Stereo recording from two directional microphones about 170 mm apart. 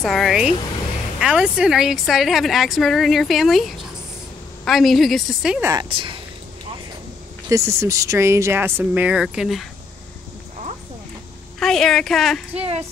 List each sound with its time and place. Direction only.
0.0 s a woman's voice: centre (ahead or behind)
5.6 s speech: 20° right (ahead or behind)
5.9 s speech: 30° right (ahead or behind)
7.4 s speech: 15° right (ahead or behind); by 9.7 s centre (ahead or behind)
11.6 s a woman's voice: centre (ahead or behind)